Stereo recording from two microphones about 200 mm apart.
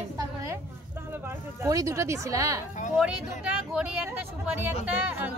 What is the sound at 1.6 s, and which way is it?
Speech, 15° right (ahead or behind).